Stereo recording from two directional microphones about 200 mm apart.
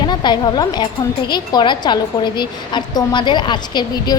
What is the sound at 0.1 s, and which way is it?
A woman's voice, 20° left (ahead or behind).